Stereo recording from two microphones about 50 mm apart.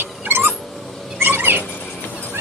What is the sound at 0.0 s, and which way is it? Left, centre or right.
Cat, right.